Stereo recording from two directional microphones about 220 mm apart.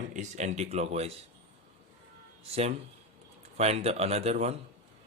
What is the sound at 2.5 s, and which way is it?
Speech, 30° right (ahead or behind).